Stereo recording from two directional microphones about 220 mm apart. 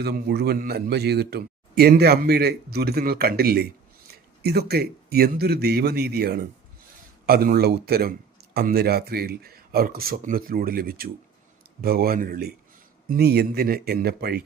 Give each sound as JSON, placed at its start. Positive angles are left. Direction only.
{"t": 0.0, "sound": "a man's voice", "side_deg": -50}